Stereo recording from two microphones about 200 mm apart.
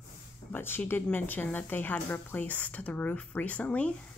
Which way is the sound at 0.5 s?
10° left (ahead or behind).